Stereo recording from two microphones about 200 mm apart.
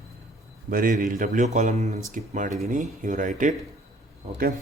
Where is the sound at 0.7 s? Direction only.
45° right (ahead or behind).